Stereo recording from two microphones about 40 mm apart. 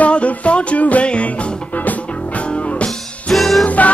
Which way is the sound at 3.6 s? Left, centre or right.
Left.